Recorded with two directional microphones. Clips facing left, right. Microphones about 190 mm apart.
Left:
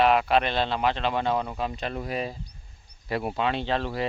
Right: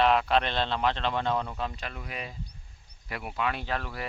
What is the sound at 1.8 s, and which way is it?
Speech, 35° left (ahead or behind).